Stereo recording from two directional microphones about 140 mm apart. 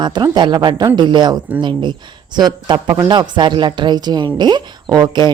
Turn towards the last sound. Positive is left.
turn(degrees=-30)  # may be behind; listen again after turning